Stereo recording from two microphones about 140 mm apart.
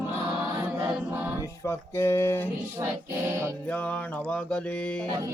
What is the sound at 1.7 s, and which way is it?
Speech, 20° left (ahead or behind).